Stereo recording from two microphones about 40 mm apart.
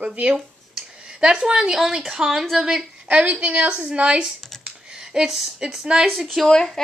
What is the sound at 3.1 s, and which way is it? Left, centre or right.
A woman's voice, right.